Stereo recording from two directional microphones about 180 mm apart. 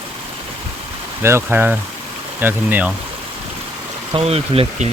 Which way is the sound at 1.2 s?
15° right (ahead or behind).